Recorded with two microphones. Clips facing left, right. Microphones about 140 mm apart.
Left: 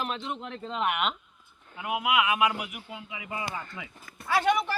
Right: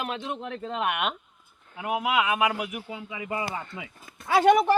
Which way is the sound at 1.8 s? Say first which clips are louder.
Right 1 dB; 30° right (ahead or behind).